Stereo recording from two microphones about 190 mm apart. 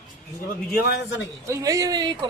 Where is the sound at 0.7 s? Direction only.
55° left (ahead or behind).